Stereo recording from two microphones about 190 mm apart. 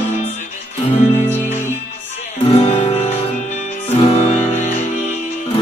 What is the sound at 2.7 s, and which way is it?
Music, 40° left (ahead or behind).